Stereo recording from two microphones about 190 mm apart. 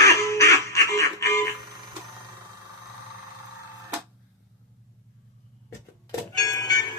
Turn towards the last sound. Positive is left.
turn(degrees=20)  # may be behind; listen again after turning